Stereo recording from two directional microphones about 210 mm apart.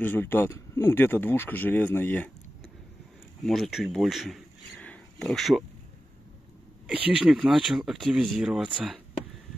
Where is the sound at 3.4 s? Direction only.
Centre (ahead or behind).